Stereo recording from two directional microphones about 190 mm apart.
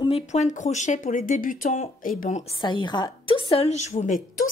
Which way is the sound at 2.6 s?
25° left (ahead or behind).